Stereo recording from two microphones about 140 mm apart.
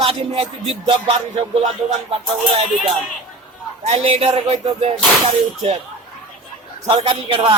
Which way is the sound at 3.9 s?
45° right (ahead or behind).